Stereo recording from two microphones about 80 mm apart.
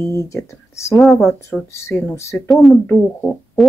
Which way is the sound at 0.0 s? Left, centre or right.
Left.